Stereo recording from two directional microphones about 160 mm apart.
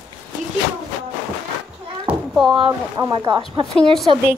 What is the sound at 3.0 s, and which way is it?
Speech, 25° right (ahead or behind).